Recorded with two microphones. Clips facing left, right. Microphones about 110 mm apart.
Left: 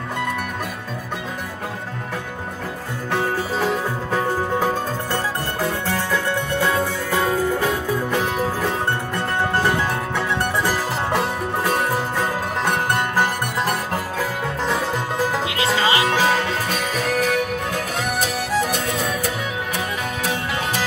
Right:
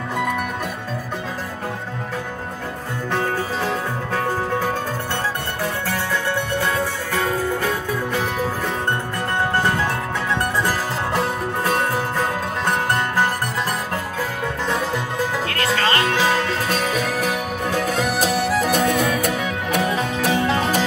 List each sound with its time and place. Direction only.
15.4 s music: 15° left (ahead or behind)
18.7 s music: 55° right (ahead or behind)